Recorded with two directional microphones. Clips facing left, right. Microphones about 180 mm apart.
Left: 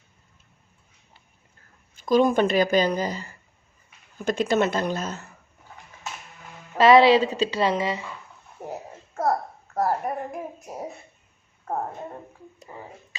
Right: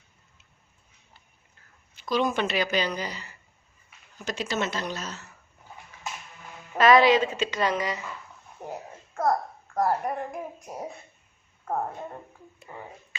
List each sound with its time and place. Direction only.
2.0 s speech: 50° left (ahead or behind)
6.7 s a woman's voice: 25° left (ahead or behind)
8.6 s a sound: 5° left (ahead or behind)
9.7 s a woman's voice: 5° left (ahead or behind)